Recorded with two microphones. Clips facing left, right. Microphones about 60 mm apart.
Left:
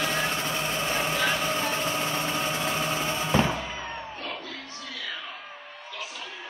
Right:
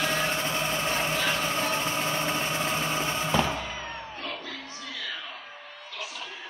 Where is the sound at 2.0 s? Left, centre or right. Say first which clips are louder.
Even; right.